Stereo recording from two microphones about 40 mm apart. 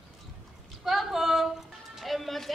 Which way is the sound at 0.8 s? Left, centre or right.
Centre.